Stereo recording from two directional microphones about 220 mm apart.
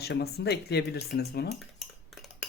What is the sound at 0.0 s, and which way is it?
Speech, 45° left (ahead or behind).